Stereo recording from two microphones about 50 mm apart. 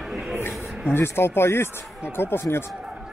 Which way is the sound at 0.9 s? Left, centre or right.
Left.